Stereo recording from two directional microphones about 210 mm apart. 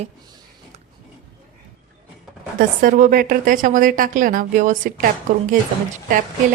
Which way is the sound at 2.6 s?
40° right (ahead or behind).